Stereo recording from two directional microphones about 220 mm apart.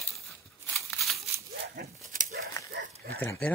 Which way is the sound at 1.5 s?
45° right (ahead or behind).